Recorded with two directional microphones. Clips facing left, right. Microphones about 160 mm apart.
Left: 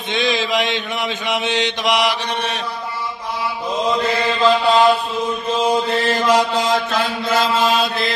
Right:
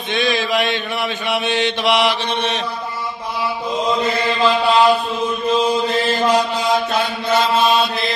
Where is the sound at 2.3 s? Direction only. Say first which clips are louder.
Right 2 dB; 10° left (ahead or behind).